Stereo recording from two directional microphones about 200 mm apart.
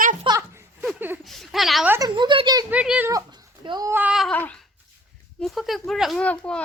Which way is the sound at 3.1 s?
20° right (ahead or behind).